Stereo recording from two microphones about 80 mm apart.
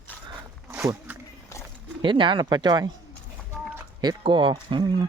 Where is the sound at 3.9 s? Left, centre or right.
Right.